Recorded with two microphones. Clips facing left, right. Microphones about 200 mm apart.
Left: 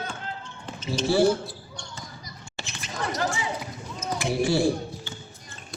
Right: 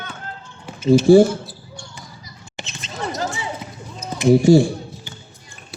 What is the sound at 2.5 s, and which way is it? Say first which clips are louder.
Basketball bounce: right 3 dB; 20° right (ahead or behind).